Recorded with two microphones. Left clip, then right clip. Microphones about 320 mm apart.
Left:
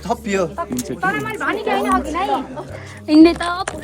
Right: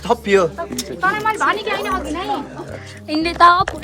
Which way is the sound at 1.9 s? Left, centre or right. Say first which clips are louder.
Left 3 dB; centre.